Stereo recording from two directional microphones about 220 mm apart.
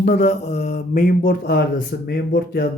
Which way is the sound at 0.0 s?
35° left (ahead or behind).